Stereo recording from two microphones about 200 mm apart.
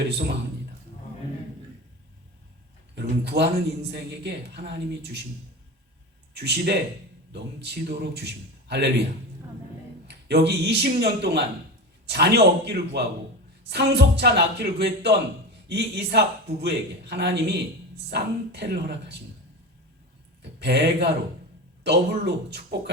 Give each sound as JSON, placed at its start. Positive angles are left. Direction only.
{"t": 2.9, "sound": "a man's voice", "side_deg": -55}
{"t": 6.3, "sound": "a man's voice", "side_deg": -55}
{"t": 10.1, "sound": "a man's voice", "side_deg": -55}
{"t": 20.4, "sound": "a man's voice", "side_deg": -55}